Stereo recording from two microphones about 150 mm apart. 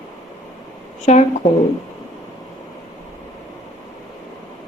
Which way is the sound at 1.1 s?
45° left (ahead or behind).